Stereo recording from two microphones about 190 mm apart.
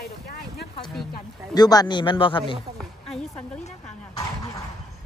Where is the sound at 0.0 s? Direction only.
55° left (ahead or behind).